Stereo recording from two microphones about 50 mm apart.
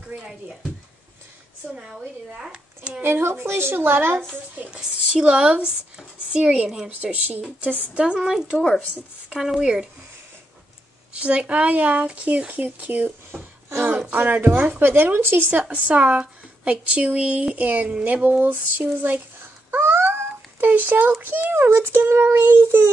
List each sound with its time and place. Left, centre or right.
1.8 s speech: centre
3.0 s speech: right
4.6 s a woman's voice: right
8.2 s speech: centre
11.1 s a woman's voice: right
15.6 s a woman's voice: right
19.8 s a sound: right
21.2 s speech: right